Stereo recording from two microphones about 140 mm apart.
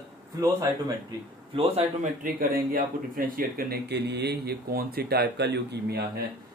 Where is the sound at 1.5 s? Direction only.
40° right (ahead or behind).